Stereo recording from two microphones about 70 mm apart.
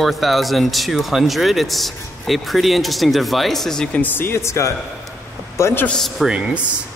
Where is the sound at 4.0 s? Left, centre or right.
Left.